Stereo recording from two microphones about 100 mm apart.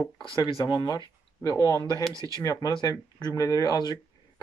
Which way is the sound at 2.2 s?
35° right (ahead or behind).